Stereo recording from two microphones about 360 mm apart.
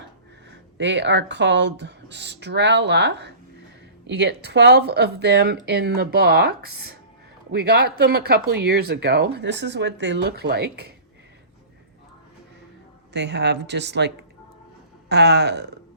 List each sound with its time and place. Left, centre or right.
0.5 s speech: right
13.1 s speech: right